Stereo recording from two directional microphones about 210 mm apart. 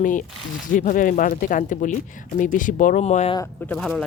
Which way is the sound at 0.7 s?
35° left (ahead or behind).